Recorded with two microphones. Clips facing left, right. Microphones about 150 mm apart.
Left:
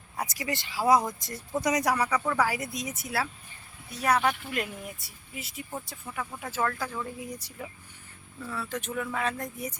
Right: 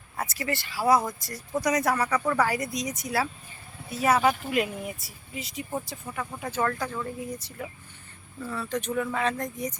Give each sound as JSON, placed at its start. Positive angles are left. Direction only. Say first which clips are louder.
{"t": 0.2, "sound": "speech", "louder": "right 2 dB", "side_deg": 15}
{"t": 8.4, "sound": "speech", "louder": "right 4 dB", "side_deg": 0}